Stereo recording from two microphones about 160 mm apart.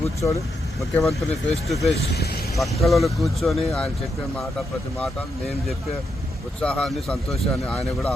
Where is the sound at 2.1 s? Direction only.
80° left.